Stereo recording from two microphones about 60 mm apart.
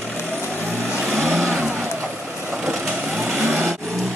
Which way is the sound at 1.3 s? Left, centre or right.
Centre.